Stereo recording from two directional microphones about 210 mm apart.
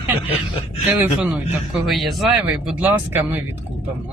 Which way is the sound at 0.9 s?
5° right (ahead or behind).